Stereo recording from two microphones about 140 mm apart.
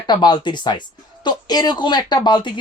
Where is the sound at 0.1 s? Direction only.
30° left (ahead or behind).